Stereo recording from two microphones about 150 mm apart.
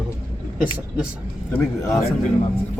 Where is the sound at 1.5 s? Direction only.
15° left (ahead or behind).